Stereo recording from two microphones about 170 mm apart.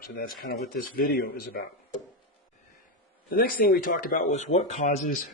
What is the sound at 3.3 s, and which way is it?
Speech, 55° left (ahead or behind).